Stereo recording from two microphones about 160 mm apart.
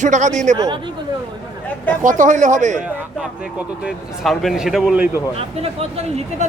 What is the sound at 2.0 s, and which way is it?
Speech, 55° right (ahead or behind).